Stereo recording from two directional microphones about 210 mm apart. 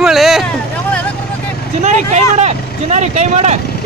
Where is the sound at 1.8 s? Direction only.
35° right (ahead or behind).